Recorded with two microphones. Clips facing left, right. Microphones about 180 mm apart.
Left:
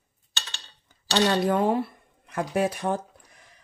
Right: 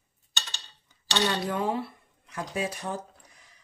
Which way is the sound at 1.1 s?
50° left (ahead or behind).